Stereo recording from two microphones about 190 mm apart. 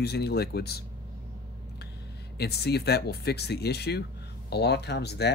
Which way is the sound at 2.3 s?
60° left (ahead or behind).